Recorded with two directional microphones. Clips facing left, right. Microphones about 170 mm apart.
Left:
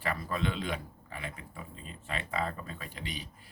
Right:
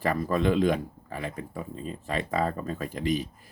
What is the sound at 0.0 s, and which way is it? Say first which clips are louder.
Speech: right 8 dB; 40° right (ahead or behind).